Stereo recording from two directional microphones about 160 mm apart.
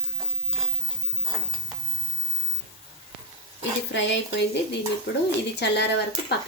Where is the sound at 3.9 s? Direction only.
90° left.